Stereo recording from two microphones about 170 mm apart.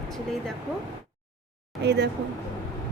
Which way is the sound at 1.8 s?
80° right.